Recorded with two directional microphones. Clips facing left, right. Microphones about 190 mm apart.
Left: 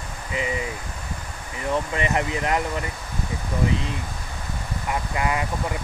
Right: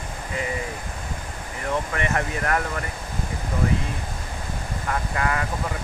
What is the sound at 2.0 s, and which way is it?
Speech, 20° left (ahead or behind).